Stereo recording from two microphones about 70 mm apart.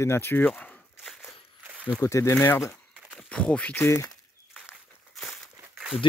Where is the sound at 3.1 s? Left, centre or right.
Centre.